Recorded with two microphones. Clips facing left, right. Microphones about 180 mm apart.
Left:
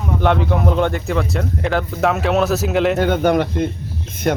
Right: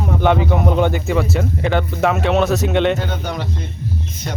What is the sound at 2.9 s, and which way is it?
Speech, 55° left (ahead or behind).